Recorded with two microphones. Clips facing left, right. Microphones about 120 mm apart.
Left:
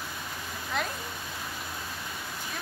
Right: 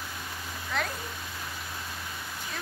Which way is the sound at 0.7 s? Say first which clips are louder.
Even; 15° left (ahead or behind).